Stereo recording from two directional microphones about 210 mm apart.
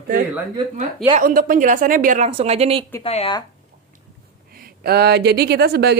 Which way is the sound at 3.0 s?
30° left (ahead or behind).